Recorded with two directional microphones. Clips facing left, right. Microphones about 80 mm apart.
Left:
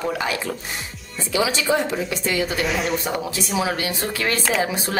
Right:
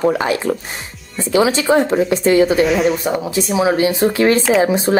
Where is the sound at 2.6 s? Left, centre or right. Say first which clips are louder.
Right 8 dB; centre.